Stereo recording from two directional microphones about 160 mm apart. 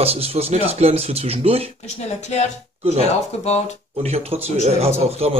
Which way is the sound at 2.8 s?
40° right (ahead or behind).